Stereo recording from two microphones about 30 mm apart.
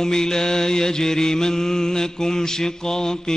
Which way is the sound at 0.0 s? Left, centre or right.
Centre.